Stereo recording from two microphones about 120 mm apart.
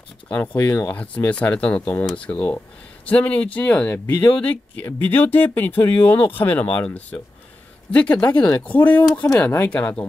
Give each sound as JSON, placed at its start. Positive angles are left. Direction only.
{"t": 0.3, "sound": "speech", "side_deg": 15}